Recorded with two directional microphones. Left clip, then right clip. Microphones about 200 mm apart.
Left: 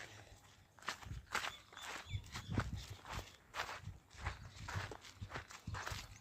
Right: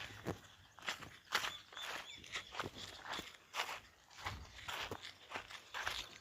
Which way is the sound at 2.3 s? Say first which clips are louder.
Right 6 dB; 25° left (ahead or behind).